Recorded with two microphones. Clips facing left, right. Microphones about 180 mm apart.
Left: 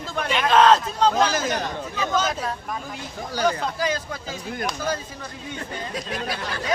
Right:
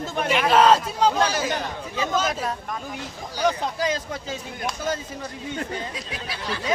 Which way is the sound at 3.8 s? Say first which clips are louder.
Right 2 dB; 25° right (ahead or behind).